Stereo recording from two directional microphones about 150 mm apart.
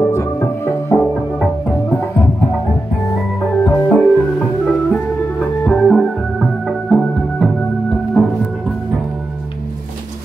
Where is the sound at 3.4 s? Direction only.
10° left (ahead or behind).